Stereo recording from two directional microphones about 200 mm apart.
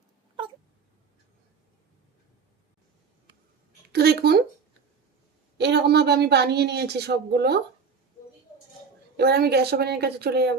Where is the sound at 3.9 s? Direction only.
55° right (ahead or behind).